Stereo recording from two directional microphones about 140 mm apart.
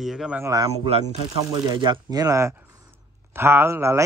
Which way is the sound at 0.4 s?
25° right (ahead or behind).